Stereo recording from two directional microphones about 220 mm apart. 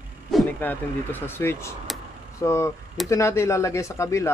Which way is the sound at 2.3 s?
15° left (ahead or behind).